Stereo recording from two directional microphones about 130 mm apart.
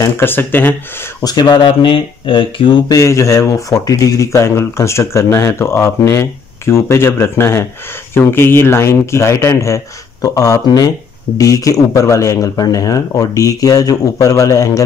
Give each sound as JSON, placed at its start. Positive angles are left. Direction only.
{"t": 0.0, "sound": "speech", "side_deg": 15}
{"t": 1.2, "sound": "speech", "side_deg": 30}
{"t": 2.9, "sound": "speech", "side_deg": 25}